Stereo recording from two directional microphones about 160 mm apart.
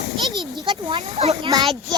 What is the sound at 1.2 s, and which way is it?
Speech, 40° right (ahead or behind).